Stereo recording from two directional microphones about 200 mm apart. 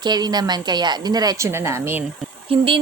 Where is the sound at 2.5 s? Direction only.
25° right (ahead or behind).